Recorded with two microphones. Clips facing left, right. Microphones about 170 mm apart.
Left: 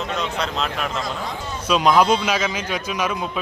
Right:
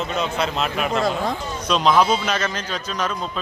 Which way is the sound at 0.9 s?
55° right (ahead or behind).